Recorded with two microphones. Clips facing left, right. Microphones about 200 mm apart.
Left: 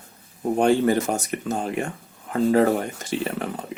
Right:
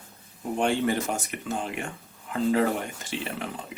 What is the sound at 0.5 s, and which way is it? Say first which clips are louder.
Speech: left 6 dB; 40° left (ahead or behind).